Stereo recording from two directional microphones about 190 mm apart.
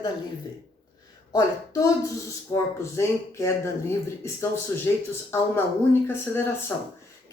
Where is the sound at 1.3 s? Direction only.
15° left (ahead or behind).